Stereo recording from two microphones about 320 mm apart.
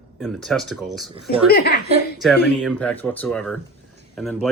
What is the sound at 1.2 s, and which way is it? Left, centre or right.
Speech, left.